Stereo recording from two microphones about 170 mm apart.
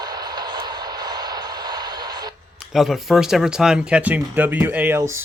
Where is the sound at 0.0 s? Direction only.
25° right (ahead or behind).